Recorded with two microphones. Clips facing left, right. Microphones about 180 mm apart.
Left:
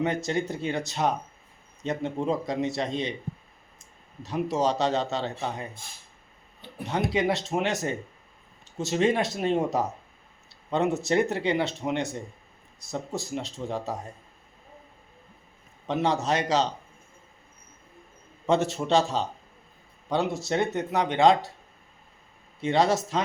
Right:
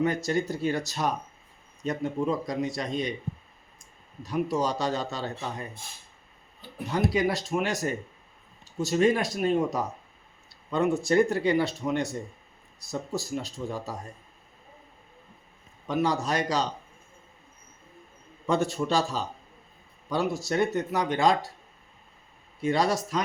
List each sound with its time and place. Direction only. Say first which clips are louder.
0.0 s a man's voice: right 1 dB; 25° left (ahead or behind)
4.2 s a man's voice: left 1 dB; 25° left (ahead or behind)
15.9 s a man's voice: left 1 dB; 25° left (ahead or behind)
18.4 s a man's voice: left 2 dB; 25° left (ahead or behind)
22.6 s a man's voice: left 2 dB; 25° left (ahead or behind)